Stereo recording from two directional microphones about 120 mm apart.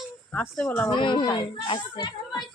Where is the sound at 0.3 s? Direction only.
15° left (ahead or behind).